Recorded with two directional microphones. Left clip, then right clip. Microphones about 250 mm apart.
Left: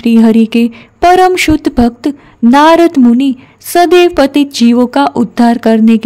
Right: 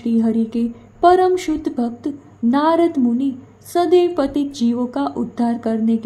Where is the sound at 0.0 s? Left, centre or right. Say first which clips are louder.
Left 11 dB; left.